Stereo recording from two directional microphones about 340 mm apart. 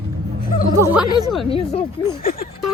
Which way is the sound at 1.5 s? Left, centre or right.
Left.